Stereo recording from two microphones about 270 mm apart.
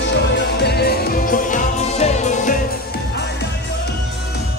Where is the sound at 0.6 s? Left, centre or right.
Left.